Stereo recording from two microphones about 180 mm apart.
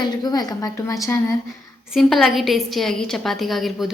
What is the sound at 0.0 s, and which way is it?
A woman's voice, 20° left (ahead or behind).